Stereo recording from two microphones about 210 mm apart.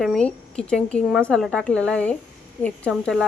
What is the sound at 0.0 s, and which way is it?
A woman's voice, 5° left (ahead or behind).